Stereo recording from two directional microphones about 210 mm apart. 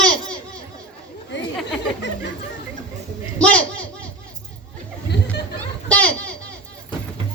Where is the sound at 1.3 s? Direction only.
60° left (ahead or behind).